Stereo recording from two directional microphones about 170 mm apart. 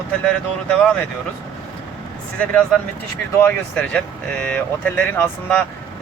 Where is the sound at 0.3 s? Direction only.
10° left (ahead or behind).